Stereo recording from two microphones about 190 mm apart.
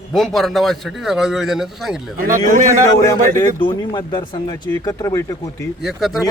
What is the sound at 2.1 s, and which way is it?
Speech, 45° right (ahead or behind).